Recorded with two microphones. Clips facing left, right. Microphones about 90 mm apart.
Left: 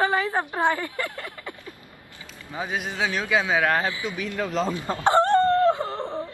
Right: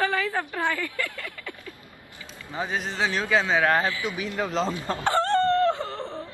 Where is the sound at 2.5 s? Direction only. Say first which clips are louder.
Even; 5° left (ahead or behind).